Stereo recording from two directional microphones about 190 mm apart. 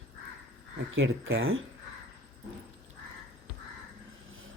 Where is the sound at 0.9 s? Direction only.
90° right.